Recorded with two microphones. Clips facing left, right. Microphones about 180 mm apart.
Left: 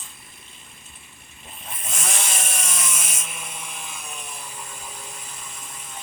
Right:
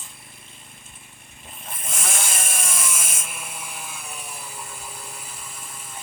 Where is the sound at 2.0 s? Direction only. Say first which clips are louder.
Even; 5° right (ahead or behind).